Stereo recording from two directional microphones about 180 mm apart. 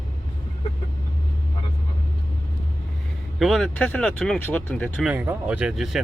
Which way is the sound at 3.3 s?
Centre (ahead or behind).